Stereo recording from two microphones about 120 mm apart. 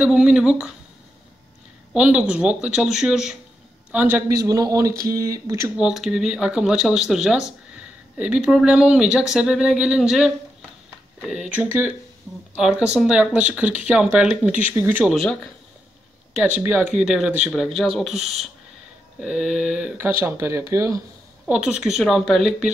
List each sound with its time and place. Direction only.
0.0 s speech: 5° right (ahead or behind)
2.0 s a man's voice: 10° right (ahead or behind)
4.3 s speech: 30° right (ahead or behind)
5.8 s speech: 5° right (ahead or behind)
15.0 s speech: 5° left (ahead or behind)
16.3 s speech: 15° right (ahead or behind)
20.0 s speech: 20° right (ahead or behind)
21.5 s speech: 5° right (ahead or behind)